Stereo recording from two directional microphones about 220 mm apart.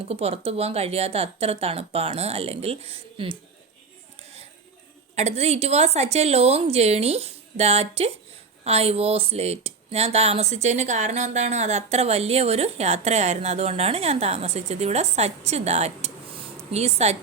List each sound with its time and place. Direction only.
0.0 s speech: 25° right (ahead or behind)
5.1 s speech: 30° right (ahead or behind)